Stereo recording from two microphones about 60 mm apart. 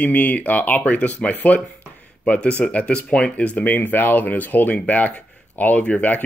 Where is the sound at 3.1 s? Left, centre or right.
Centre.